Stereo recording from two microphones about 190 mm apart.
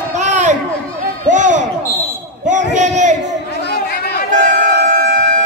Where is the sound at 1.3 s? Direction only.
40° right (ahead or behind).